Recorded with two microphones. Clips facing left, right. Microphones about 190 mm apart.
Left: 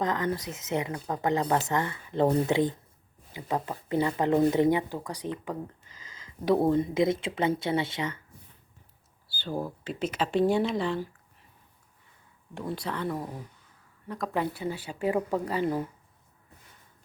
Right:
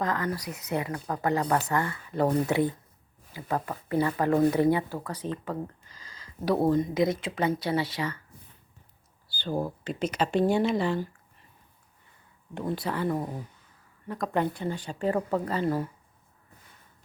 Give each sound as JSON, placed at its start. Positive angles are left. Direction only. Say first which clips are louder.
{"t": 0.0, "sound": "speech", "louder": "left 1 dB", "side_deg": 20}
{"t": 9.5, "sound": "speech", "louder": "right 3 dB", "side_deg": -10}
{"t": 9.8, "sound": "speech", "louder": "right 2 dB", "side_deg": 0}
{"t": 12.5, "sound": "speech", "louder": "right 3 dB", "side_deg": -5}